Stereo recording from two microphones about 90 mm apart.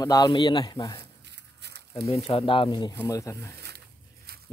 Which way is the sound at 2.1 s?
85° left.